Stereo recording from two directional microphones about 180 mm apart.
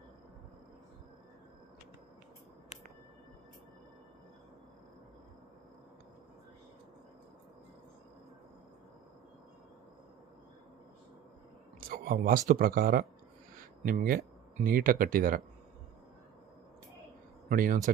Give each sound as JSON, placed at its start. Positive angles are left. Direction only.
{"t": 11.8, "sound": "speech", "side_deg": -55}
{"t": 17.5, "sound": "speech", "side_deg": -50}